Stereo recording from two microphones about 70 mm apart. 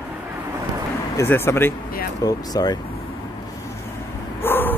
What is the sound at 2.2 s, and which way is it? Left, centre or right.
Speech, left.